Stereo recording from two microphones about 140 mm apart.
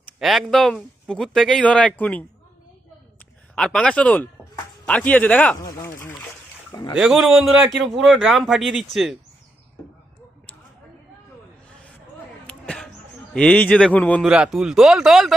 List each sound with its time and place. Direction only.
0.2 s a man's voice: centre (ahead or behind)
3.5 s a man's voice: 5° left (ahead or behind)
5.6 s speech: 20° left (ahead or behind)
6.9 s a man's voice: 5° right (ahead or behind)
12.5 s a sound: 5° left (ahead or behind)
13.3 s a man's voice: 10° left (ahead or behind)
14.2 s a man's voice: 5° right (ahead or behind)